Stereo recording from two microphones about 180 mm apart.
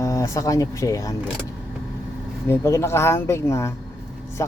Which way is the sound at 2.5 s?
15° left (ahead or behind).